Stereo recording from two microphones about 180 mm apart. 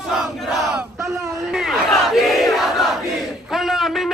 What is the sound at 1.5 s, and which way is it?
Battle cry, centre (ahead or behind).